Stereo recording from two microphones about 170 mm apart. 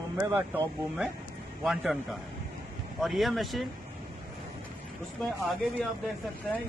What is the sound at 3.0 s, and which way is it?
Speech, centre (ahead or behind).